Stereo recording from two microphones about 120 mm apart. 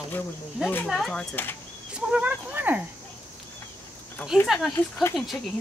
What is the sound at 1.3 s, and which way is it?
Speech, 20° left (ahead or behind).